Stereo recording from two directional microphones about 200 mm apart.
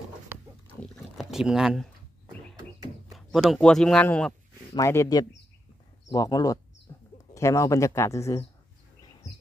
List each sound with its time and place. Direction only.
0.7 s a sound: 5° left (ahead or behind)
3.1 s a man's voice: centre (ahead or behind); by 6.6 s 15° left (ahead or behind)
6.9 s bird: 15° left (ahead or behind)
7.3 s speech: 15° left (ahead or behind)